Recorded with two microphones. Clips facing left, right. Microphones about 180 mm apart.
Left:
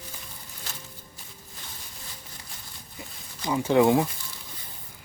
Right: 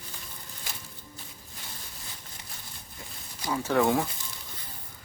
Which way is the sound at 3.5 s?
15° left (ahead or behind).